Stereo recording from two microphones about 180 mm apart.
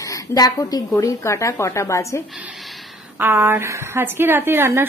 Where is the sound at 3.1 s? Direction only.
10° right (ahead or behind).